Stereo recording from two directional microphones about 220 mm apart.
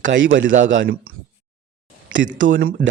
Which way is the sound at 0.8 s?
45° right (ahead or behind).